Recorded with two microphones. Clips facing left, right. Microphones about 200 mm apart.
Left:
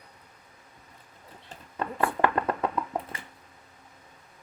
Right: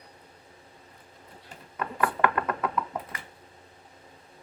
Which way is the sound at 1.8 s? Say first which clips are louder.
Left 1 dB; 30° left (ahead or behind).